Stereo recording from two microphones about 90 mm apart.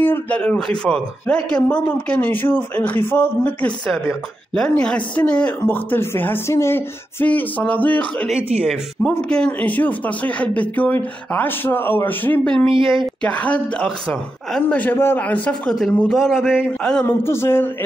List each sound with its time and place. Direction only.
0.0 s speech: 20° left (ahead or behind)
0.4 s speech: 10° left (ahead or behind)
4.6 s speech: 10° left (ahead or behind)
8.3 s speech: 10° right (ahead or behind)
9.3 s speech: 15° left (ahead or behind)
12.7 s speech: 75° right (ahead or behind)
13.2 s speech: 15° left (ahead or behind)
13.8 s speech: 5° left (ahead or behind)
14.7 s speech: 20° left (ahead or behind)
15.8 s speech: 5° left (ahead or behind)
17.0 s speech: 30° left (ahead or behind)